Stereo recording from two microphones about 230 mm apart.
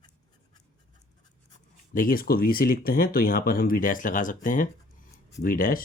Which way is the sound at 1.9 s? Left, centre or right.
Left.